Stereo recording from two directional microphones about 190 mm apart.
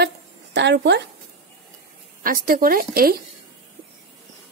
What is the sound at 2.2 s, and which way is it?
Speech, 45° right (ahead or behind).